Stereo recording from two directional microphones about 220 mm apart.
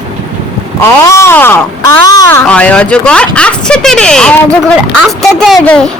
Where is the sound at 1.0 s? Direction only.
10° left (ahead or behind).